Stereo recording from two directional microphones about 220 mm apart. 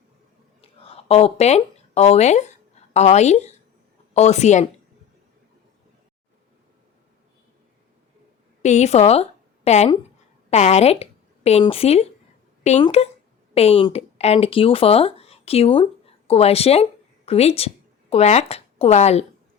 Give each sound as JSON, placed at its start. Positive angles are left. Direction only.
{"t": 0.6, "sound": "a sound", "side_deg": 25}
{"t": 4.1, "sound": "speech", "side_deg": 30}
{"t": 8.6, "sound": "a woman's voice", "side_deg": 30}